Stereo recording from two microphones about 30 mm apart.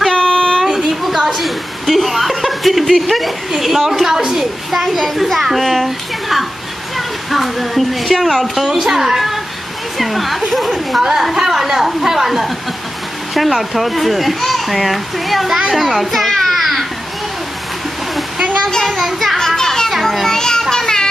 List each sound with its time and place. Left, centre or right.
0.1 s a sound: left
0.7 s a child's voice: centre
8.7 s a woman's voice: centre
9.9 s a child's voice: centre
11.0 s a woman's voice: centre
13.3 s a child's voice: centre
16.5 s children playing: centre
19.3 s children playing: centre
19.9 s children playing: centre
20.2 s children playing: centre
20.7 s music: centre